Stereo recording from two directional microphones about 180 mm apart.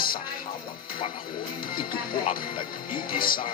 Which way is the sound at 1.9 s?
55° left (ahead or behind).